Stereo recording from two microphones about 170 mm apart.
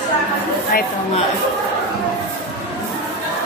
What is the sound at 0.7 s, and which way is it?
Speech, 60° left (ahead or behind).